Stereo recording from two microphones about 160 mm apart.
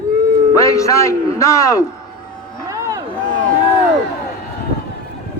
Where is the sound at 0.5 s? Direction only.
20° left (ahead or behind).